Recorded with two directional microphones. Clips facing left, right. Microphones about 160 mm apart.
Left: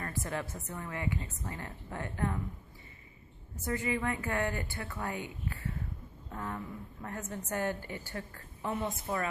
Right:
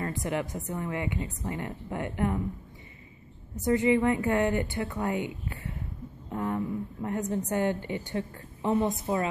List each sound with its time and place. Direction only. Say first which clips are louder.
0.0 s a woman's voice: right 6 dB; 20° right (ahead or behind)
3.6 s a woman's voice: right 10 dB; 20° right (ahead or behind)